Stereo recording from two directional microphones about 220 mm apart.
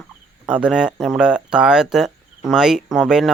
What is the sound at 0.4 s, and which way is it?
Speech, 5° right (ahead or behind).